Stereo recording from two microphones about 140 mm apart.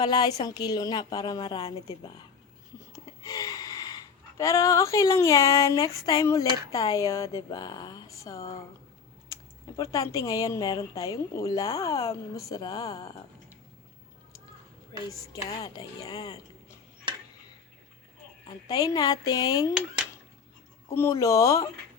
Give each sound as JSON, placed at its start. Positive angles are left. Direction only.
{"t": 0.0, "sound": "a woman's voice", "side_deg": 30}
{"t": 2.9, "sound": "speech", "side_deg": 25}
{"t": 14.9, "sound": "speech", "side_deg": 30}
{"t": 18.4, "sound": "speech", "side_deg": 30}
{"t": 20.9, "sound": "speech", "side_deg": 20}